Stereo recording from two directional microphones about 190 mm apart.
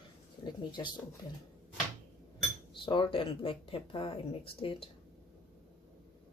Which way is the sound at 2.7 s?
25° left (ahead or behind).